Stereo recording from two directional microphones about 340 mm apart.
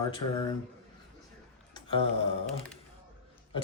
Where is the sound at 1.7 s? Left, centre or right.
Centre.